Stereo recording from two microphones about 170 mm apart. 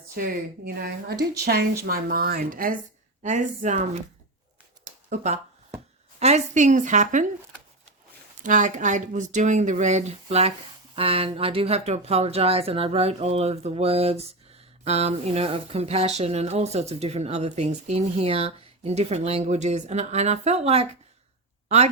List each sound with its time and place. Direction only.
0.2 s speech: 65° right (ahead or behind)
3.2 s speech: 45° right (ahead or behind)
5.0 s a woman's voice: 45° right (ahead or behind)
8.4 s speech: 50° right (ahead or behind)